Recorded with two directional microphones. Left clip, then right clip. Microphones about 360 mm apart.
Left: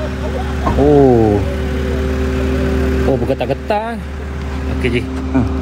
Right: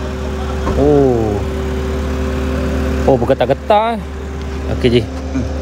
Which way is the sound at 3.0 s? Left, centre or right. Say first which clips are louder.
Right 7 dB; centre.